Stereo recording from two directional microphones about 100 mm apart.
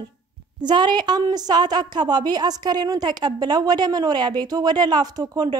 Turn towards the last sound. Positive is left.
turn(degrees=-40)  # may be behind; listen again after turning